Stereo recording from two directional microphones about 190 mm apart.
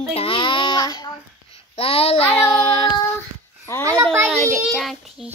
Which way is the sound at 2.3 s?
25° left (ahead or behind).